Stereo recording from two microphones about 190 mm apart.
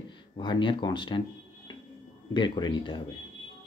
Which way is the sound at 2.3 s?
25° left (ahead or behind).